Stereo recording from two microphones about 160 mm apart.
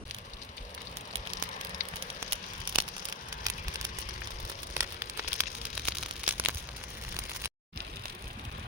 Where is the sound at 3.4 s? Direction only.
25° right (ahead or behind).